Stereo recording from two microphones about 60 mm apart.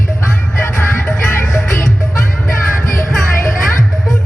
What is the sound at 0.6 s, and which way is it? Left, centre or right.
Music, left.